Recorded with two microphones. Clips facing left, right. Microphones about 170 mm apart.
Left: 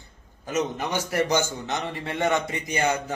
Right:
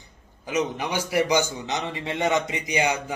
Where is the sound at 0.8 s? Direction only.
10° right (ahead or behind).